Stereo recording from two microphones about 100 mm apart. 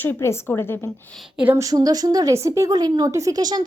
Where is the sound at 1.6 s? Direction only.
35° right (ahead or behind).